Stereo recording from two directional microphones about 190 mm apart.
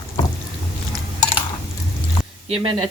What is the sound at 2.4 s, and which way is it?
Speech, 30° right (ahead or behind).